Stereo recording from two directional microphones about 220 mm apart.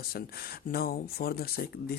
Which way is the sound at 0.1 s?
45° left (ahead or behind).